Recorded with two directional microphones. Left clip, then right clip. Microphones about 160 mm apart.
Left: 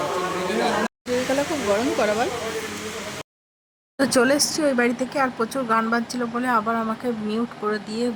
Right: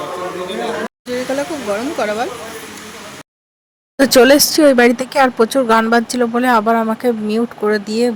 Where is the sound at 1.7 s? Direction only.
15° right (ahead or behind).